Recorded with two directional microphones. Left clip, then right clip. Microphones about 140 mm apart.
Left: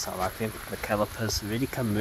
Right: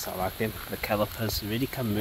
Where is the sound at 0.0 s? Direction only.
Centre (ahead or behind).